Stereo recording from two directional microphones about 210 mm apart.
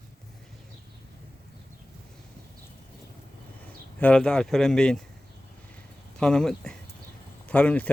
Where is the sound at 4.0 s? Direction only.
5° left (ahead or behind).